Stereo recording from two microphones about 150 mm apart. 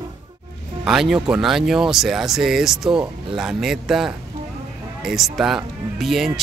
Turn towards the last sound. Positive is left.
turn(degrees=0)  # may be behind; listen again after turning